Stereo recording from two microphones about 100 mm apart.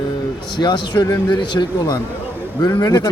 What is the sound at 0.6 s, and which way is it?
A man's voice, 50° left (ahead or behind).